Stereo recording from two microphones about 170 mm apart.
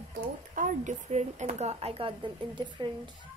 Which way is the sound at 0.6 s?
50° right (ahead or behind).